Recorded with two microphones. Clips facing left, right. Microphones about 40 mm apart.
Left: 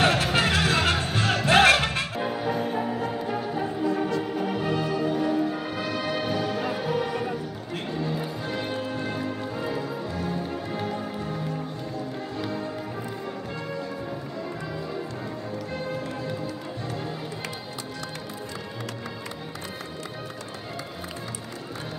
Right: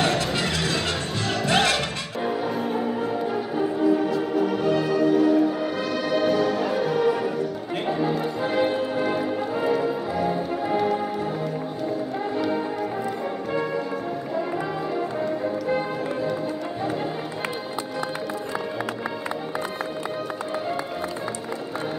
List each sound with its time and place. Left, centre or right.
0.0 s music: left
2.2 s music: centre
7.8 s music: centre